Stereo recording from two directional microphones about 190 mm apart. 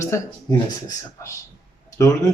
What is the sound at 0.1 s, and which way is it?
Speech, 15° left (ahead or behind).